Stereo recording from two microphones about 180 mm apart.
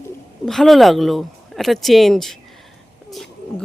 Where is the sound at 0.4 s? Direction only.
Centre (ahead or behind).